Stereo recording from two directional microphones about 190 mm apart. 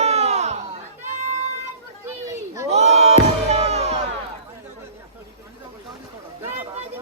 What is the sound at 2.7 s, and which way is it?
Crowd, 35° right (ahead or behind).